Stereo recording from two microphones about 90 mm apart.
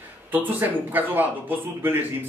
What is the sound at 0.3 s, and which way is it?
A man's voice, 20° right (ahead or behind).